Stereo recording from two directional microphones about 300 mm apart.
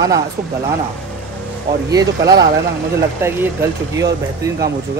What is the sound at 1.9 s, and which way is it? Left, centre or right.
Speech, centre.